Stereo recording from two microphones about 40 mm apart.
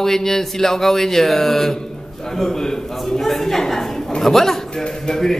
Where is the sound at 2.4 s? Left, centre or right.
Centre.